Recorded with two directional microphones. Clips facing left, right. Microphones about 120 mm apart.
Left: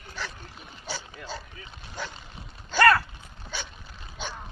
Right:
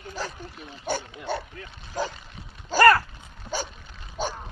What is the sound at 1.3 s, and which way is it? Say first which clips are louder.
Boat: right 10 dB; 60° right (ahead or behind).